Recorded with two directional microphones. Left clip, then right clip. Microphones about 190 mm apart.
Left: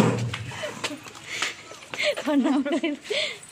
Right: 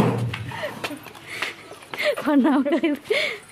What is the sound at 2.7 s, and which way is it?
Speech, 40° right (ahead or behind).